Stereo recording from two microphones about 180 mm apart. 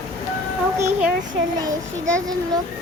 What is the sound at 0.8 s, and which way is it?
Speech, 15° right (ahead or behind).